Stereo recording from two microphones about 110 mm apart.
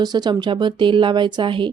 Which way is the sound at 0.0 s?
40° right (ahead or behind).